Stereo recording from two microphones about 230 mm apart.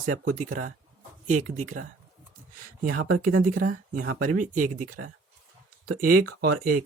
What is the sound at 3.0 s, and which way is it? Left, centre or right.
Speech, right.